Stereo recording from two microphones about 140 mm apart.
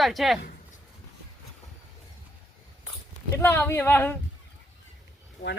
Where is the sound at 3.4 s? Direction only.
15° left (ahead or behind).